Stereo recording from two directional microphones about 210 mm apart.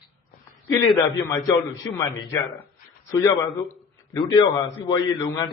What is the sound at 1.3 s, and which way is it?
Speech, 15° left (ahead or behind).